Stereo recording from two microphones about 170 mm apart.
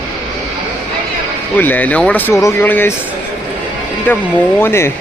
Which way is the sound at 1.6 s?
10° left (ahead or behind).